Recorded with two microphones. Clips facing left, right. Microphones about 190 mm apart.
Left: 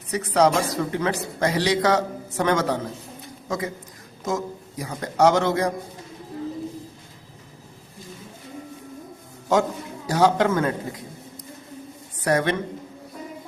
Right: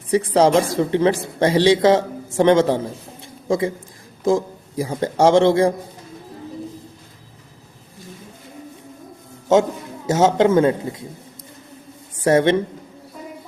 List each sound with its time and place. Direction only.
0.1 s speech: 30° right (ahead or behind)
10.1 s speech: 25° right (ahead or behind)
12.2 s speech: 25° right (ahead or behind)